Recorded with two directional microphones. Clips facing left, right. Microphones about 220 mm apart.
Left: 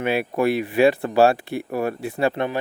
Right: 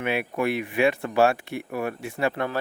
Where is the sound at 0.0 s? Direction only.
35° left (ahead or behind).